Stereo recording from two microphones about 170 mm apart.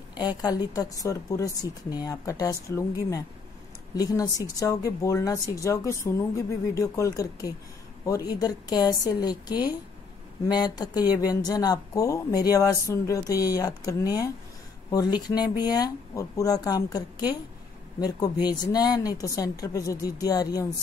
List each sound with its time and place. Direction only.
0.1 s speech: 25° left (ahead or behind)